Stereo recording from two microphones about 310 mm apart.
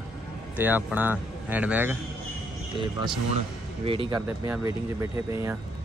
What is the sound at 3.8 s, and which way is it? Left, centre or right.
Speech, centre.